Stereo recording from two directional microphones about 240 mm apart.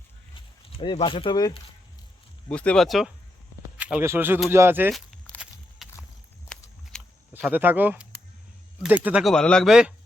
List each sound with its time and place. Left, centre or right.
0.8 s speech: left
2.5 s speech: centre
3.8 s walk: centre
6.5 s a sound: centre
8.8 s speech: centre